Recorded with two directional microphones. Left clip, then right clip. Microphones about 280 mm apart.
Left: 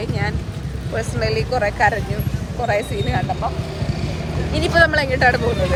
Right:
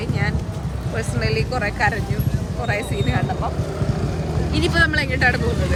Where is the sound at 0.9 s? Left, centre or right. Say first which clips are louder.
Left 2 dB; centre.